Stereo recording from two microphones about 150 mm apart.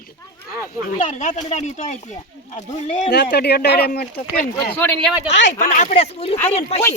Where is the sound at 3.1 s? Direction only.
90° left.